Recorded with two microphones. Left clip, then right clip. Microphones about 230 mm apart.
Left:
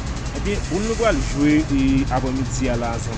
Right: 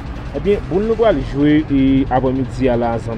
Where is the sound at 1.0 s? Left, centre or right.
Right.